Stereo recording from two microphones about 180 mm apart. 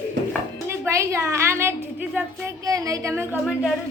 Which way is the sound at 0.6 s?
15° right (ahead or behind).